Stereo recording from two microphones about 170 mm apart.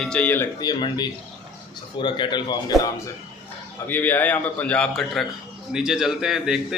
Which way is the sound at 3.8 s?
10° left (ahead or behind).